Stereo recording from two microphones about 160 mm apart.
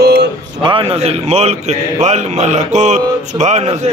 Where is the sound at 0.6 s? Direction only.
35° right (ahead or behind).